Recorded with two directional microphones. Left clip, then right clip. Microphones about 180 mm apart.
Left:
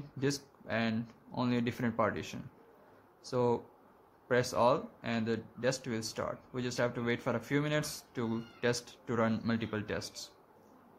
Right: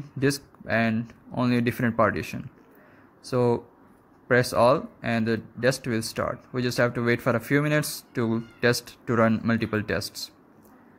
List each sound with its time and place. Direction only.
0.2 s speech: 20° right (ahead or behind)